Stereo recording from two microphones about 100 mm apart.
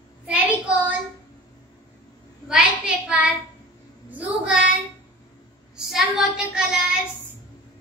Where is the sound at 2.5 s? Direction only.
10° right (ahead or behind).